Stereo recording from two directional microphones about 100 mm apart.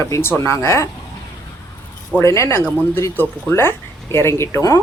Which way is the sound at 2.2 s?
30° left (ahead or behind).